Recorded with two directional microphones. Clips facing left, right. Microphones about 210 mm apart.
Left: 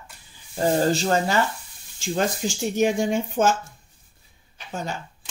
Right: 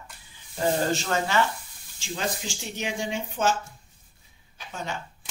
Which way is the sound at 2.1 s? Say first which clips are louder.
Left 7 dB; 45° left (ahead or behind).